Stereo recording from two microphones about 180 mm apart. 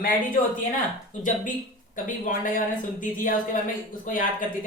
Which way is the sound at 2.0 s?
45° left (ahead or behind).